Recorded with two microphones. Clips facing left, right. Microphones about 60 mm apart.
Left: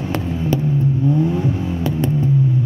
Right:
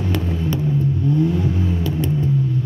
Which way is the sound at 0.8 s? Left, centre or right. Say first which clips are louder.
Even; centre.